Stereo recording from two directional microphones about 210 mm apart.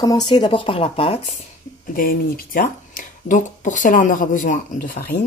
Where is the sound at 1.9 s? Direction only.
40° left (ahead or behind).